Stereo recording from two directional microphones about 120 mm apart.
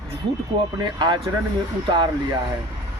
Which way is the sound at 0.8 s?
40° right (ahead or behind).